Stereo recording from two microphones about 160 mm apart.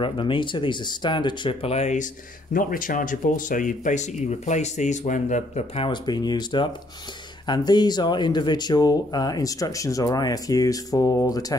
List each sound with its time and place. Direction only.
0.0 s speech: 30° left (ahead or behind)
2.5 s speech: 60° left (ahead or behind)
5.8 s speech: 30° left (ahead or behind)